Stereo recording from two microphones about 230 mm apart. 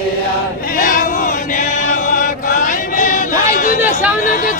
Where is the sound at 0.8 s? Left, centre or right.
Left.